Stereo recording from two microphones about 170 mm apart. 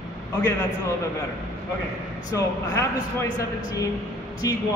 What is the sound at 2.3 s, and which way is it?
A man's voice, 15° left (ahead or behind).